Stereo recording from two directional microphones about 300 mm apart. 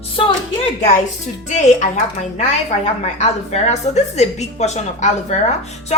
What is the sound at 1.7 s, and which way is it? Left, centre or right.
A woman's voice, left.